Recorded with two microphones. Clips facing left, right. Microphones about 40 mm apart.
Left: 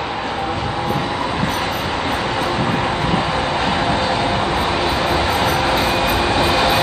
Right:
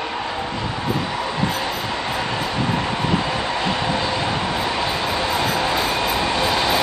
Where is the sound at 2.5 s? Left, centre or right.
Left.